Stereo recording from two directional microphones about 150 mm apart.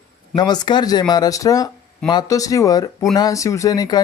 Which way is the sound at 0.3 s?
30° left (ahead or behind).